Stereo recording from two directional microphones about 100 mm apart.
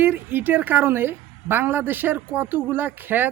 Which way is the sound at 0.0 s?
20° right (ahead or behind).